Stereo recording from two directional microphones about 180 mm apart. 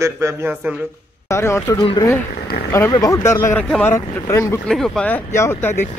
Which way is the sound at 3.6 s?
5° left (ahead or behind).